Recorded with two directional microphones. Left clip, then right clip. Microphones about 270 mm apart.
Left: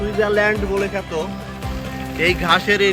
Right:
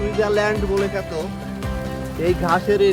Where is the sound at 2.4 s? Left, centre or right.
Centre.